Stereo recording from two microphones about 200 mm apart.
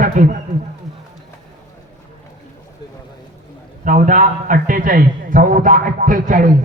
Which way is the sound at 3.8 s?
40° right (ahead or behind).